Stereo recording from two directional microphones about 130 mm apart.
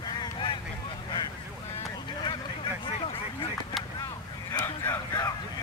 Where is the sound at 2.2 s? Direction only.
40° left (ahead or behind).